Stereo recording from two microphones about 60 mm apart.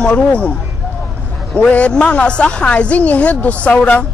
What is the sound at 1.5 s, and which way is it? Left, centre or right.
A woman's voice, left.